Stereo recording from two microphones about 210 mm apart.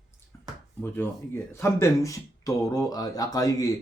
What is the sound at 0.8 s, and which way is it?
Speech, 10° left (ahead or behind).